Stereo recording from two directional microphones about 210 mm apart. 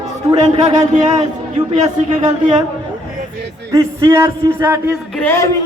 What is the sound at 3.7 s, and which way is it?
A man's voice, 15° right (ahead or behind).